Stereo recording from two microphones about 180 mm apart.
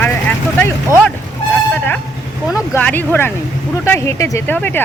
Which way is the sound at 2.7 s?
10° left (ahead or behind).